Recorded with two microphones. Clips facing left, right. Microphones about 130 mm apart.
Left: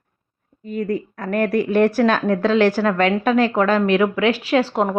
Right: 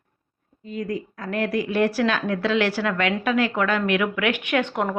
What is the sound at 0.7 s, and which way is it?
A woman's voice, 55° left (ahead or behind).